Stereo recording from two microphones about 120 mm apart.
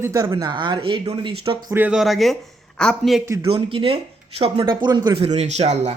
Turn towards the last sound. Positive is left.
turn(degrees=-65)  # may be behind; listen again after turning